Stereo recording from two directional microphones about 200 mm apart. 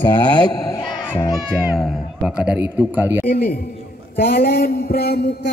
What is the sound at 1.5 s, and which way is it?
Speech, 5° right (ahead or behind).